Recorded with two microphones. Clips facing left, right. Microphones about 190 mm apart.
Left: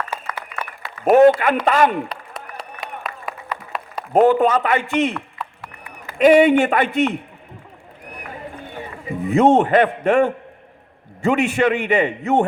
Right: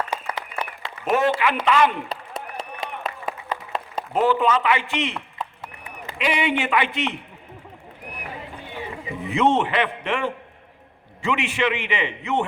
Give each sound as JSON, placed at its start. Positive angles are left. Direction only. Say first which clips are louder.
{"t": 1.1, "sound": "a man's voice", "louder": "left 9 dB", "side_deg": 50}
{"t": 3.0, "sound": "a sound", "louder": "right 1 dB", "side_deg": -25}
{"t": 4.1, "sound": "a man's voice", "louder": "left 6 dB", "side_deg": 50}
{"t": 6.1, "sound": "a man's voice", "louder": "left 12 dB", "side_deg": 45}
{"t": 9.2, "sound": "a man's voice", "louder": "left 6 dB", "side_deg": 45}